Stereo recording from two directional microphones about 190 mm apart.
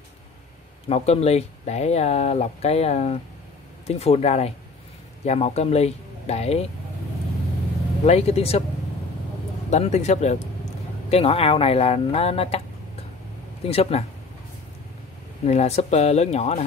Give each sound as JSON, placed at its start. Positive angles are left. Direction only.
{"t": 0.8, "sound": "speech", "side_deg": 35}
{"t": 8.0, "sound": "speech", "side_deg": 35}
{"t": 9.7, "sound": "speech", "side_deg": 35}
{"t": 13.7, "sound": "speech", "side_deg": 30}
{"t": 15.4, "sound": "speech", "side_deg": 35}